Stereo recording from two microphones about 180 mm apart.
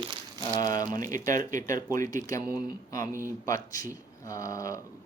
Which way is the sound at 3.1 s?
15° right (ahead or behind).